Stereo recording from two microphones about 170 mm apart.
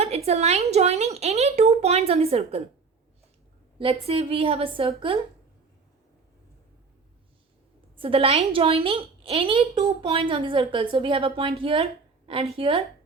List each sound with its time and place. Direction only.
0.0 s a woman's voice: 35° right (ahead or behind)
3.8 s speech: 35° right (ahead or behind)
7.9 s speech: 35° right (ahead or behind)